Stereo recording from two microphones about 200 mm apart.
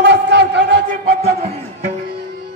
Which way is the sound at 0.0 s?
60° right (ahead or behind).